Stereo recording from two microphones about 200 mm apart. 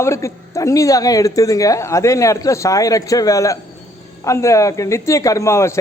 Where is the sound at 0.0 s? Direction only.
15° left (ahead or behind).